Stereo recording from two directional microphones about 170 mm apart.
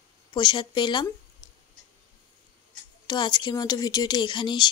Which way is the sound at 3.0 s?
25° left (ahead or behind).